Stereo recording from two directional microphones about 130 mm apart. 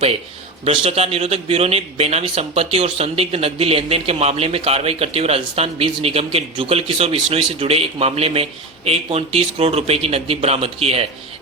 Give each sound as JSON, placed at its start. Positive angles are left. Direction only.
{"t": 0.6, "sound": "a man's voice", "side_deg": -45}